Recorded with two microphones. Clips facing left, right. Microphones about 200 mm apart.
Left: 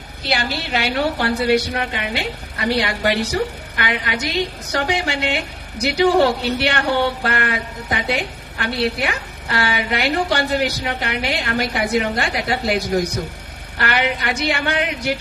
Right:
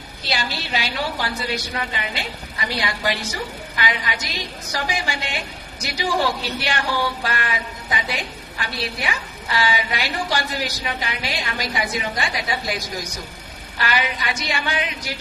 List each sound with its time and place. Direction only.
0.3 s a woman's voice: 60° left (ahead or behind)